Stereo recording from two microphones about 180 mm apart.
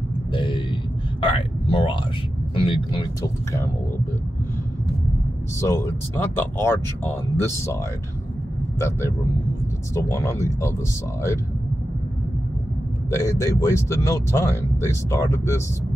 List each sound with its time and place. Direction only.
0.3 s a sound: 30° left (ahead or behind)
2.5 s speech: 30° left (ahead or behind)
5.6 s speech: 15° left (ahead or behind)
8.7 s speech: 15° left (ahead or behind)
13.1 s speech: 15° left (ahead or behind)